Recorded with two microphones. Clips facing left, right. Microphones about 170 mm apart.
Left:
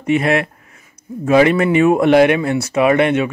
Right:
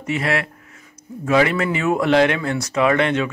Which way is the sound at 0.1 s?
20° left (ahead or behind).